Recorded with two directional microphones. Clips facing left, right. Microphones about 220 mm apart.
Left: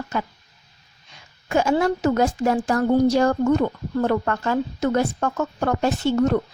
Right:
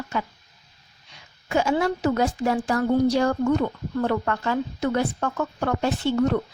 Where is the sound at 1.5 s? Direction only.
45° left (ahead or behind).